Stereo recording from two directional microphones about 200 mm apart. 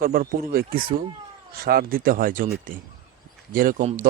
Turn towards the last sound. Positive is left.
turn(degrees=-40)  # may be behind; listen again after turning